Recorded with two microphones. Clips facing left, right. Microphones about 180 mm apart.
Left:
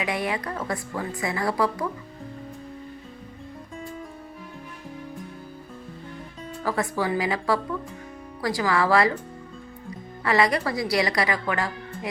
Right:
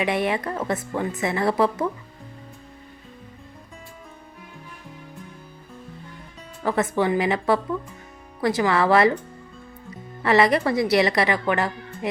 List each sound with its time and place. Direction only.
0.0 s a woman's voice: 25° right (ahead or behind)
6.7 s a woman's voice: 25° right (ahead or behind)
10.2 s a woman's voice: 25° right (ahead or behind)